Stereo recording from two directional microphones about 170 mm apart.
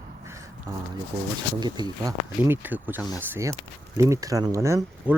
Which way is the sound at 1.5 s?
25° right (ahead or behind).